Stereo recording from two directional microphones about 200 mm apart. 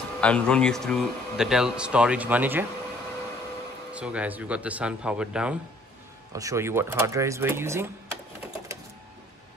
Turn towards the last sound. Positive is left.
turn(degrees=-10)  # may be behind; listen again after turning